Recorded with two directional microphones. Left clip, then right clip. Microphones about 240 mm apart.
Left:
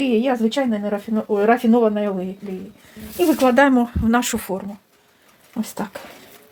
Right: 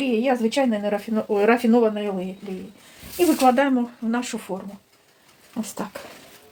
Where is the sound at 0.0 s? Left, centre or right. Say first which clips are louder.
Left 2 dB; left.